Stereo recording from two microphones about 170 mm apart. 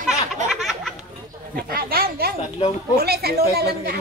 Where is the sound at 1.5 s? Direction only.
60° right (ahead or behind).